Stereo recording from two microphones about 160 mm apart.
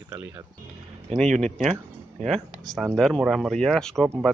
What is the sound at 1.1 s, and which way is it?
Speech, 5° left (ahead or behind).